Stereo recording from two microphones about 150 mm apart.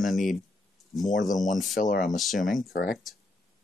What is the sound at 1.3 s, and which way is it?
Speech, 60° left (ahead or behind).